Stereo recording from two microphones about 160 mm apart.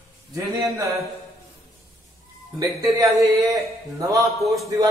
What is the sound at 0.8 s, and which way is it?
Speech, 20° right (ahead or behind).